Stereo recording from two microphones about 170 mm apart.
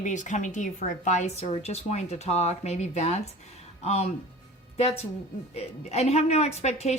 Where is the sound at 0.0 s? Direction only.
45° left (ahead or behind).